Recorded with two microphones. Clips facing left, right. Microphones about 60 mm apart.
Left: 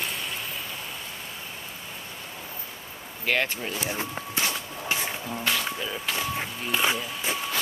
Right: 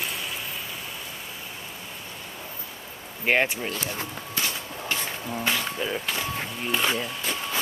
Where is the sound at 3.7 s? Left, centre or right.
Centre.